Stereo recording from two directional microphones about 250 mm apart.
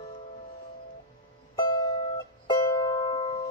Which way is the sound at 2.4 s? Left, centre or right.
Centre.